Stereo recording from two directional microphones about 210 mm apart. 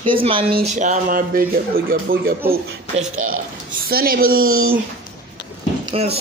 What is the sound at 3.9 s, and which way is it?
Speech, 45° right (ahead or behind).